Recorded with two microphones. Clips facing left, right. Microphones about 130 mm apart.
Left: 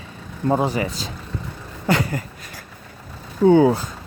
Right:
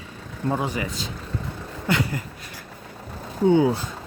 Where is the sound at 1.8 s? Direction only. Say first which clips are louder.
Left 3 dB; 40° left (ahead or behind).